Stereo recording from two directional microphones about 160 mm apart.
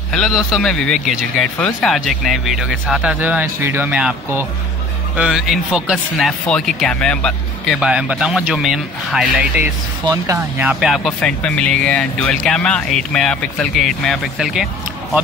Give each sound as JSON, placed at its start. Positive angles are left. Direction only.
{"t": 0.1, "sound": "speech", "side_deg": 0}
{"t": 10.0, "sound": "speech", "side_deg": -20}
{"t": 10.7, "sound": "speech", "side_deg": 0}